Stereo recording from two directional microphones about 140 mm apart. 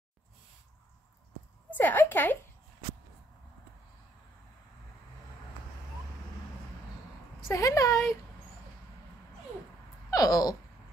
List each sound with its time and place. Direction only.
1.7 s a woman's voice: 15° left (ahead or behind)
7.3 s a woman's voice: 25° left (ahead or behind)
10.1 s a sound: 25° left (ahead or behind)